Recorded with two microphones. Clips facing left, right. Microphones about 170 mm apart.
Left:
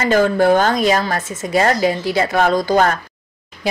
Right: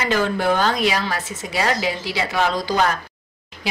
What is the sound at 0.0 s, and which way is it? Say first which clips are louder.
A woman's voice: left 6 dB; 45° left (ahead or behind).